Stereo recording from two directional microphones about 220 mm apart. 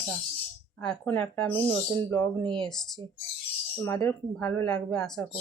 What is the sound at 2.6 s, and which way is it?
Speech, centre (ahead or behind).